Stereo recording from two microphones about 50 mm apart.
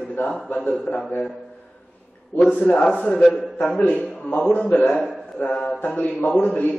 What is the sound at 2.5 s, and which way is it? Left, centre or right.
A man's voice, left.